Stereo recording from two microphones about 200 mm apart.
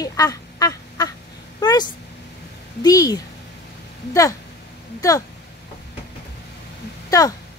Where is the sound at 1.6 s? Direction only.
20° left (ahead or behind).